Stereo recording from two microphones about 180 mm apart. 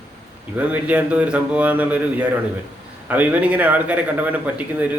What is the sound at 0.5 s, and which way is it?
A man's voice, 10° right (ahead or behind).